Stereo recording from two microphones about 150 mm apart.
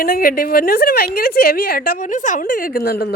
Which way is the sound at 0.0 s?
75° left (ahead or behind).